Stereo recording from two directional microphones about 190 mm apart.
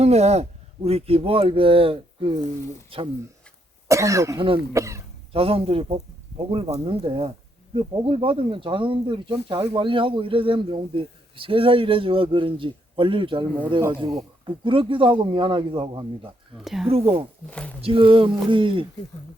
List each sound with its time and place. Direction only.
0.0 s speech: 35° right (ahead or behind)
3.8 s speech: 15° right (ahead or behind)
5.3 s speech: 30° right (ahead or behind)
16.6 s speech: centre (ahead or behind)
16.9 s speech: 30° right (ahead or behind)
17.5 s speech: 5° left (ahead or behind)
17.7 s speech: 30° right (ahead or behind)